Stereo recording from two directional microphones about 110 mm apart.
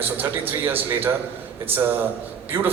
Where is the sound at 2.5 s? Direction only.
20° right (ahead or behind).